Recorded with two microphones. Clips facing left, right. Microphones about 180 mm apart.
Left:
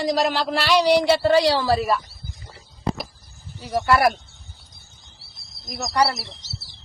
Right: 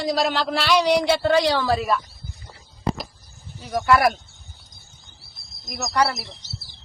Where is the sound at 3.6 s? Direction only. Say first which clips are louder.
Even; centre (ahead or behind).